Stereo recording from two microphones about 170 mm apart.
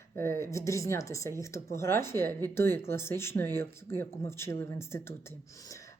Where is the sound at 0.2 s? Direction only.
15° left (ahead or behind).